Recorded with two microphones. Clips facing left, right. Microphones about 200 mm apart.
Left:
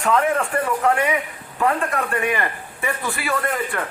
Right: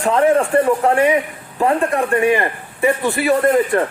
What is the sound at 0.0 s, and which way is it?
A man's voice, 30° right (ahead or behind).